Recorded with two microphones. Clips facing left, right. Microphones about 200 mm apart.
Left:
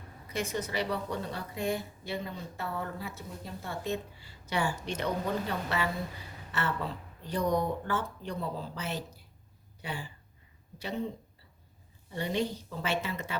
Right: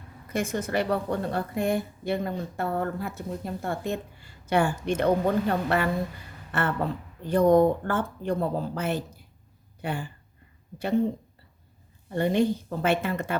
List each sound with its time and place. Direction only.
0.3 s a woman's voice: 50° right (ahead or behind)
12.1 s a woman's voice: 55° right (ahead or behind)